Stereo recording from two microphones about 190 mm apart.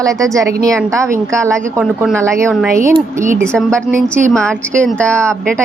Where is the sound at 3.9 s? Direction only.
40° right (ahead or behind).